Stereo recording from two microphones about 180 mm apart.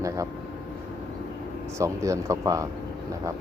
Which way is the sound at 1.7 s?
15° right (ahead or behind).